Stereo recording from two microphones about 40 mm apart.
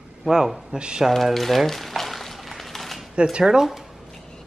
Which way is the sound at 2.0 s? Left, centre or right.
Centre.